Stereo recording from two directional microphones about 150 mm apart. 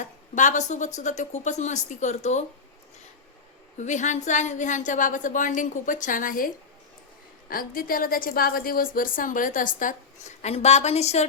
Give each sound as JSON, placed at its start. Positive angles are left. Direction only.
{"t": 0.0, "sound": "a woman's voice", "side_deg": 55}
{"t": 3.8, "sound": "a woman's voice", "side_deg": 55}
{"t": 7.5, "sound": "a woman's voice", "side_deg": 70}